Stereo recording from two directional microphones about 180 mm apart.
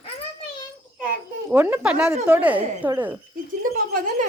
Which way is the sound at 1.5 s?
10° right (ahead or behind).